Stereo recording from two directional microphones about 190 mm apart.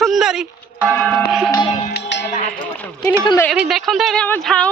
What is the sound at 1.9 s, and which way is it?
Music, 65° left (ahead or behind).